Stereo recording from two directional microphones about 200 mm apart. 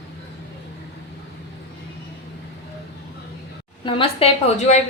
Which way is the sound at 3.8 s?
30° left (ahead or behind).